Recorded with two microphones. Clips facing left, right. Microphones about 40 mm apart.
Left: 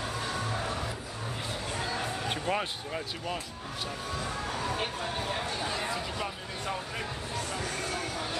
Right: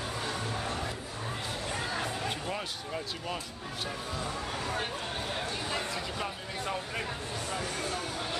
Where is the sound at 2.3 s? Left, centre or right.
Left.